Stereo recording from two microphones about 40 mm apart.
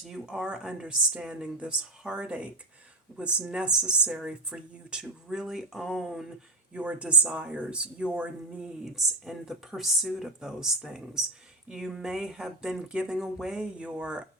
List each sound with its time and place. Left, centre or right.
0.3 s speech: right; by 6.2 s centre
6.7 s speech: right
8.8 s speech: centre
13.6 s speech: right